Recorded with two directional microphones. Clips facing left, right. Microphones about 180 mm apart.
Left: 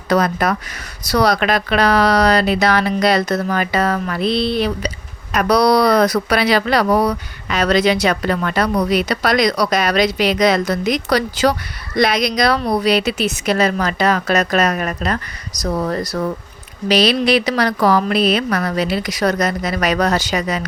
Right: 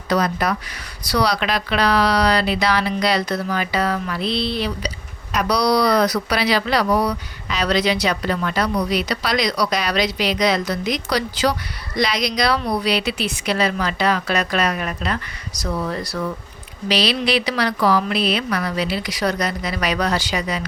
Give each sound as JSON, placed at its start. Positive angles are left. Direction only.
{"t": 0.1, "sound": "speech", "side_deg": 50}